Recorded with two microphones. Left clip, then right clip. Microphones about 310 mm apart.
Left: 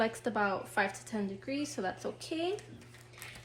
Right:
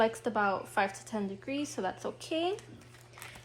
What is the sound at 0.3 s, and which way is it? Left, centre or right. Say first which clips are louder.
Speech: right 2 dB; centre.